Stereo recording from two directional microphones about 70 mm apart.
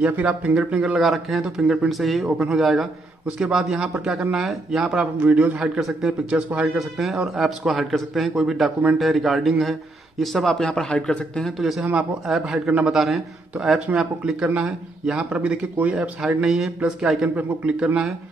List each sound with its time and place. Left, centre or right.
0.0 s a man's voice: right; by 1.5 s centre
1.6 s a man's voice: centre
1.9 s a man's voice: centre
5.2 s a man's voice: right
5.8 s a man's voice: centre
6.5 s a man's voice: centre
6.8 s a man's voice: centre
11.5 s a man's voice: centre
11.8 s a man's voice: centre
12.3 s a man's voice: centre
13.7 s a man's voice: centre
17.4 s a man's voice: centre